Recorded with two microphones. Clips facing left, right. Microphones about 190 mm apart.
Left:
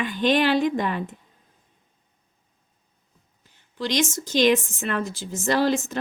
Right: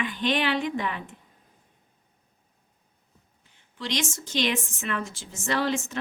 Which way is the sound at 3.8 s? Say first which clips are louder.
Left 6 dB; 40° left (ahead or behind).